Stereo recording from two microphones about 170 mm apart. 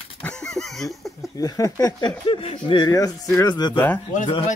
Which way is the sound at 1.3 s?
20° left (ahead or behind).